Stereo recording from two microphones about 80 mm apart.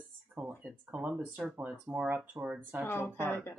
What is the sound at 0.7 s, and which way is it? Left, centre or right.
Speech, centre.